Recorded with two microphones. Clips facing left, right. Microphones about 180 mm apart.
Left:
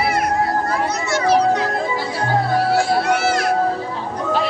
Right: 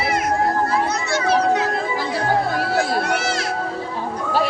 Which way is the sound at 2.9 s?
50° right (ahead or behind).